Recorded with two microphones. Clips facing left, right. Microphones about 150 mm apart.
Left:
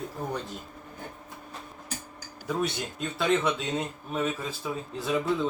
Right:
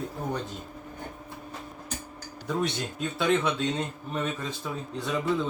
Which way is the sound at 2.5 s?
Centre (ahead or behind).